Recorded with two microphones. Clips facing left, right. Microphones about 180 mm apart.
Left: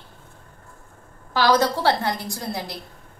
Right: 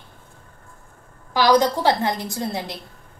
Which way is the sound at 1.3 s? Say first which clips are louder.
Right 2 dB; 15° right (ahead or behind).